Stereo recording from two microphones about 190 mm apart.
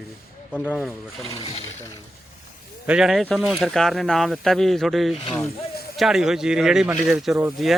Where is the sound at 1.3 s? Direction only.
30° left (ahead or behind).